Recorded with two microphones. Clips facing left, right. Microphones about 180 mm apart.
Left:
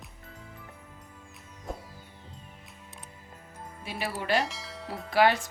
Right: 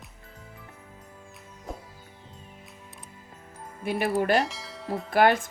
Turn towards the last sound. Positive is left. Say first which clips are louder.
# right 2 dB
turn(degrees=-50)  # may be behind; listen again after turning